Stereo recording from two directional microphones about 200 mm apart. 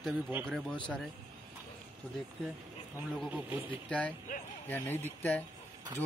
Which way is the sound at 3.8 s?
5° left (ahead or behind).